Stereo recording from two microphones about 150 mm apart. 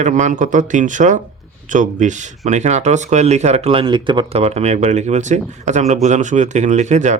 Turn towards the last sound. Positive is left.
turn(degrees=-50)  # may be behind; listen again after turning